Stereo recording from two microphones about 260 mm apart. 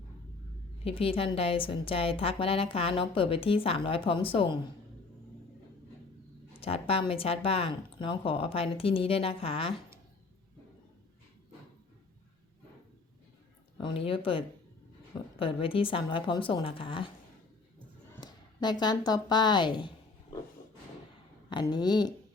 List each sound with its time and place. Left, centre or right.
0.9 s a woman's voice: left
6.5 s a woman's voice: left
13.7 s a woman's voice: centre
18.1 s speech: centre
21.5 s speech: centre